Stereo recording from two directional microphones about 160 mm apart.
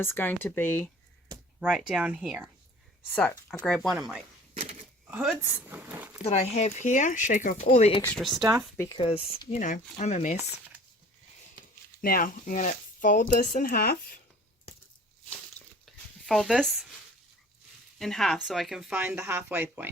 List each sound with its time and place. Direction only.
0.0 s speech: 15° left (ahead or behind)
1.5 s speech: 5° right (ahead or behind)
3.2 s speech: 10° left (ahead or behind)
3.8 s speech: 5° right (ahead or behind)
4.5 s a sound: 45° right (ahead or behind)
5.1 s speech: centre (ahead or behind)
5.6 s a sound: 10° right (ahead or behind)
6.2 s speech: 40° left (ahead or behind)
7.6 s speech: 40° left (ahead or behind)
8.0 s speech: 5° left (ahead or behind)
8.9 s speech: 35° left (ahead or behind)
12.0 s speech: 60° left (ahead or behind)
15.3 s a sound: 5° left (ahead or behind)
18.0 s speech: centre (ahead or behind)